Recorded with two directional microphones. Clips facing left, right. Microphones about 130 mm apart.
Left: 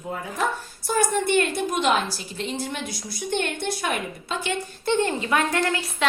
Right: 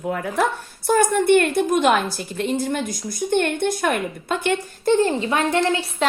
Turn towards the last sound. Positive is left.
turn(degrees=-25)  # may be behind; listen again after turning